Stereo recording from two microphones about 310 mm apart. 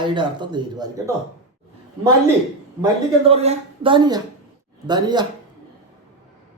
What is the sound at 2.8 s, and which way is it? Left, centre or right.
Speech, centre.